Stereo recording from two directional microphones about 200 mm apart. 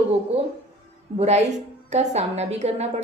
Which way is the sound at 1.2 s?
35° right (ahead or behind).